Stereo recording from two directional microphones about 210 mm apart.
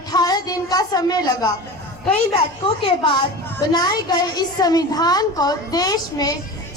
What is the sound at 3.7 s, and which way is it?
A woman's voice, 20° left (ahead or behind).